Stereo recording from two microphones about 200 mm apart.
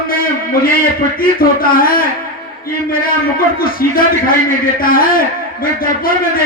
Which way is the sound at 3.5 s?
45° left (ahead or behind).